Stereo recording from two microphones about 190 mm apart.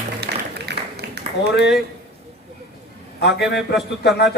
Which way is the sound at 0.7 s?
60° right (ahead or behind).